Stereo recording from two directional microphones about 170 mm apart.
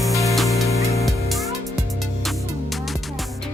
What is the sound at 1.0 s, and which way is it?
Music, centre (ahead or behind).